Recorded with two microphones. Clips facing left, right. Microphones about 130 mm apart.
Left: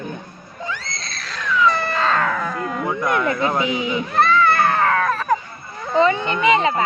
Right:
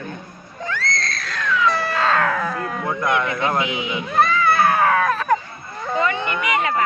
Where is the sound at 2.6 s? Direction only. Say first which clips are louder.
Left 1 dB; 15° left (ahead or behind).